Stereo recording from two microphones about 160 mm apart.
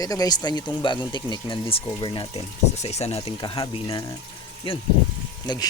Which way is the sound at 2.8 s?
40° left (ahead or behind).